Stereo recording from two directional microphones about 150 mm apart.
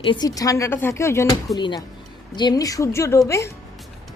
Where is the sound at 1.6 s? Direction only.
30° left (ahead or behind).